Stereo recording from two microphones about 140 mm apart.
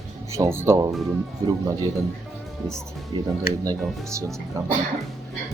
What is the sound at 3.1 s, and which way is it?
Speech, 35° right (ahead or behind).